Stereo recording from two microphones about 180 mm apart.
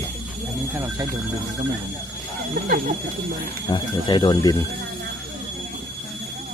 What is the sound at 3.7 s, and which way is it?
Speech, 25° left (ahead or behind).